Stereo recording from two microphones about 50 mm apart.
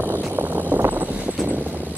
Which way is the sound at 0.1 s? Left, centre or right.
Right.